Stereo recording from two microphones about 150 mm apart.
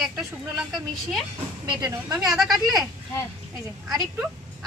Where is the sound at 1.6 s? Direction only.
25° right (ahead or behind).